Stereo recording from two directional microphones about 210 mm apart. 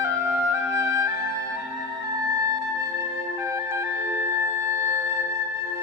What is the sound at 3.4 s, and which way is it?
Music, 15° right (ahead or behind).